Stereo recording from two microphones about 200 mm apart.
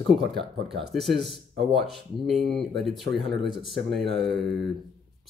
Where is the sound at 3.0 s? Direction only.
60° right (ahead or behind).